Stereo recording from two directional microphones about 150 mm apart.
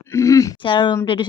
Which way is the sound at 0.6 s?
30° left (ahead or behind).